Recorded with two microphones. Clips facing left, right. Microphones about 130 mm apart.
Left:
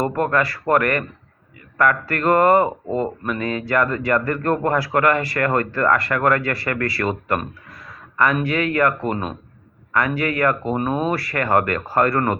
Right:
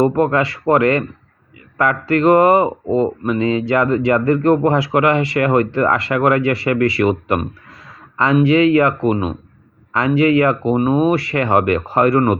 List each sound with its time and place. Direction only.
0.0 s speech: 20° right (ahead or behind)
10.2 s speech: 20° right (ahead or behind)